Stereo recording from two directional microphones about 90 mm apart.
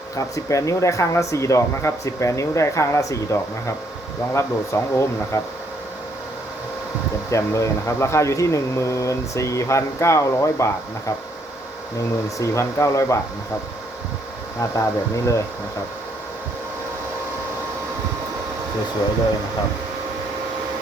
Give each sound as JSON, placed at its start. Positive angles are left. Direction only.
{"t": 0.2, "sound": "speech", "side_deg": 35}
{"t": 4.4, "sound": "speech", "side_deg": 30}
{"t": 7.3, "sound": "speech", "side_deg": 35}
{"t": 12.4, "sound": "speech", "side_deg": 35}
{"t": 14.6, "sound": "speech", "side_deg": 35}